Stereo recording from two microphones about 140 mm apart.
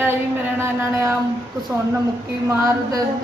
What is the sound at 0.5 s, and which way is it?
Speech, 20° right (ahead or behind).